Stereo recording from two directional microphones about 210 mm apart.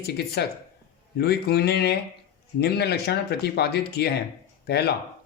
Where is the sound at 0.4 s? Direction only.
50° left (ahead or behind).